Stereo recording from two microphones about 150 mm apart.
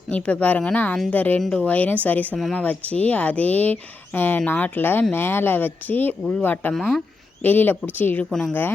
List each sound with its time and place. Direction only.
0.1 s speech: 10° left (ahead or behind)